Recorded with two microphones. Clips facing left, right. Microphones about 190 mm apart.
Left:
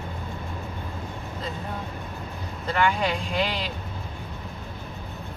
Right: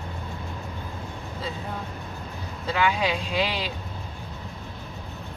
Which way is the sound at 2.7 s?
5° right (ahead or behind).